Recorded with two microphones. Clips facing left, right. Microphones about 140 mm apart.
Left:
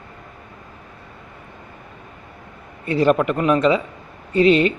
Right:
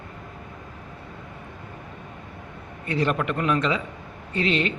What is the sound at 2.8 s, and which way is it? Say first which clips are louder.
Speech: left 8 dB; 30° left (ahead or behind).